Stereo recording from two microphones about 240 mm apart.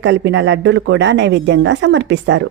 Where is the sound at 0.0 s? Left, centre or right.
Right.